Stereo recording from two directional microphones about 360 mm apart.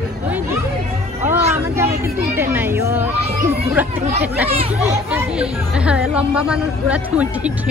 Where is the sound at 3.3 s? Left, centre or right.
Centre.